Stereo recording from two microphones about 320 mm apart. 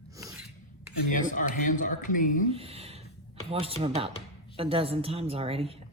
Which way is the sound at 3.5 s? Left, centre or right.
Centre.